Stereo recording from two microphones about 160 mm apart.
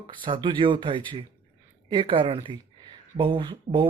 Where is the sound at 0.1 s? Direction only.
30° right (ahead or behind).